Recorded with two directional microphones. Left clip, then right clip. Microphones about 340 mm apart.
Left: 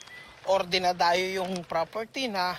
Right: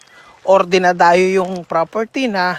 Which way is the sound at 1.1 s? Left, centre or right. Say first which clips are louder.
Right 14 dB; right.